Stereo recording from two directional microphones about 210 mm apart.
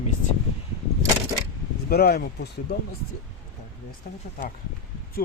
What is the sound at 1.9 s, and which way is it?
Speech, 50° left (ahead or behind).